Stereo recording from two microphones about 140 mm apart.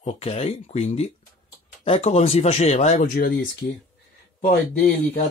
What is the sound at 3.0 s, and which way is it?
Speech, 90° left.